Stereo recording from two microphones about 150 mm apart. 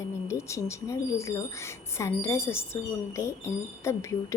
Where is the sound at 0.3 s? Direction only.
20° left (ahead or behind).